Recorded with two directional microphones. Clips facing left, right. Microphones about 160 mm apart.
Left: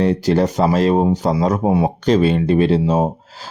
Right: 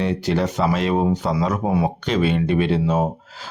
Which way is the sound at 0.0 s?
40° left (ahead or behind).